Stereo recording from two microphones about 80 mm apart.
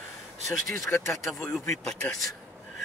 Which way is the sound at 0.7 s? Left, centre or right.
Left.